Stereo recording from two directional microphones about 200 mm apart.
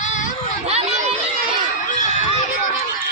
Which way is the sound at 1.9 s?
35° left (ahead or behind).